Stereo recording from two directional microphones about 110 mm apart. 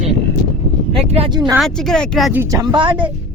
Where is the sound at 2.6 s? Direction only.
45° right (ahead or behind).